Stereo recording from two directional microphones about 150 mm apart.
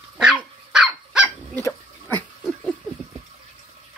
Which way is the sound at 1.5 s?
15° left (ahead or behind).